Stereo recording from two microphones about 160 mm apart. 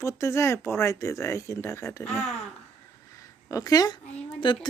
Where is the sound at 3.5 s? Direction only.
25° left (ahead or behind).